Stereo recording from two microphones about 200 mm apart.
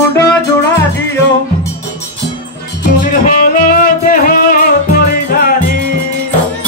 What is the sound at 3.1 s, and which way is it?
Music, 40° left (ahead or behind).